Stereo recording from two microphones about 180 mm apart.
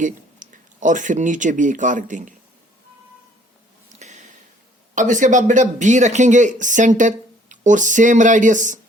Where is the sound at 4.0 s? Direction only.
40° right (ahead or behind).